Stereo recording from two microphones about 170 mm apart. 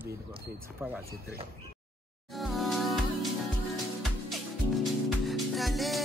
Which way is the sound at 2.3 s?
Centre (ahead or behind).